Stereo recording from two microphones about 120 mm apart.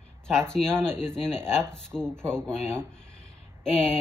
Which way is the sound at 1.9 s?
10° right (ahead or behind).